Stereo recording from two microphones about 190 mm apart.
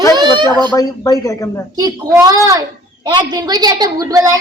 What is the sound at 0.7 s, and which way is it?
Speech, 20° left (ahead or behind).